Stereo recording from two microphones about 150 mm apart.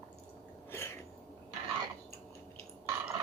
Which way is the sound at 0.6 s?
15° left (ahead or behind).